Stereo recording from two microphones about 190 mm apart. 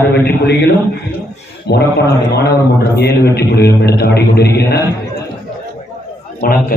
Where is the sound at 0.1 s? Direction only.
60° left (ahead or behind).